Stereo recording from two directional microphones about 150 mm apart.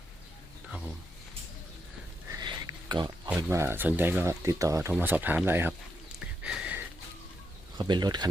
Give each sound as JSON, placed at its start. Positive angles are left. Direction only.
{"t": 2.9, "sound": "speech", "side_deg": -30}
{"t": 3.2, "sound": "speech", "side_deg": -15}
{"t": 6.1, "sound": "a sound", "side_deg": -5}
{"t": 7.8, "sound": "speech", "side_deg": -30}